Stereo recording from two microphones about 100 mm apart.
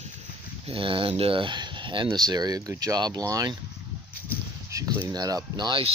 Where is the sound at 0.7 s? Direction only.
60° right (ahead or behind).